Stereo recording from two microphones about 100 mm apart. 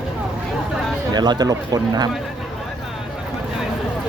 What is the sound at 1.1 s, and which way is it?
Speech, 45° right (ahead or behind).